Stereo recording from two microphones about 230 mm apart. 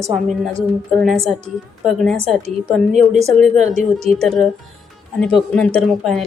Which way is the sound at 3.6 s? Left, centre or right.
Right.